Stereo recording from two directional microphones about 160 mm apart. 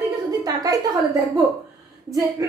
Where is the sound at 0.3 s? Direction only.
25° right (ahead or behind).